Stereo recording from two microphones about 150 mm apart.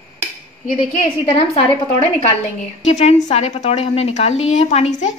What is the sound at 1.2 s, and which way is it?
A woman's voice, 40° left (ahead or behind).